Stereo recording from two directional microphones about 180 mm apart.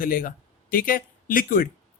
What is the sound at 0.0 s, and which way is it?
A man's voice, 50° left (ahead or behind).